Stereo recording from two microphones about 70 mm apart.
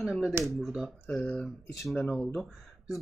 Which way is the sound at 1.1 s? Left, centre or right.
Centre.